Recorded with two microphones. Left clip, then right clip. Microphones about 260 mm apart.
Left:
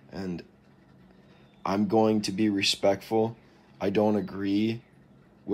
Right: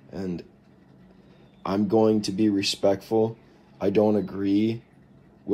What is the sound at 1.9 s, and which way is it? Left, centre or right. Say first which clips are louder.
Speech: right 4 dB; centre.